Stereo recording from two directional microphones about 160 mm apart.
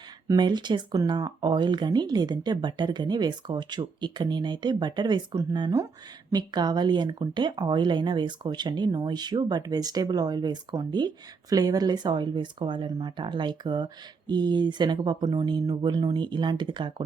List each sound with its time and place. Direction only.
0.3 s speech: 25° right (ahead or behind)